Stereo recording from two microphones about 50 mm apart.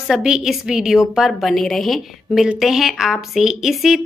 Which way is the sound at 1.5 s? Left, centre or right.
Centre.